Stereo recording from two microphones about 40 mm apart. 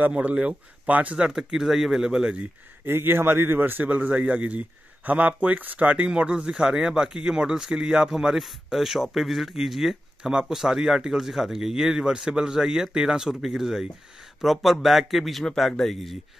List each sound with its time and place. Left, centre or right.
0.2 s a man's voice: right
1.1 s speech: right
1.5 s speech: centre
2.8 s a man's voice: right
3.9 s a man's voice: right
6.0 s speech: right
8.6 s speech: centre